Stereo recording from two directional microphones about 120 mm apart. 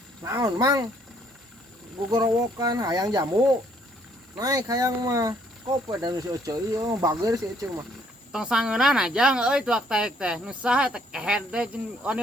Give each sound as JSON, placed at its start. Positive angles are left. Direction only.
{"t": 0.3, "sound": "speech", "side_deg": -30}
{"t": 2.0, "sound": "speech", "side_deg": -30}
{"t": 4.4, "sound": "speech", "side_deg": -30}
{"t": 8.3, "sound": "speech", "side_deg": -5}